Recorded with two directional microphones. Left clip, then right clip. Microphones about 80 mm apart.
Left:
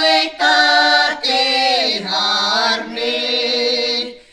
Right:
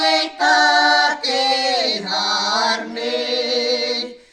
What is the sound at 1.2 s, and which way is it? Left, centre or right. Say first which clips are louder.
Chant: left 3 dB; right.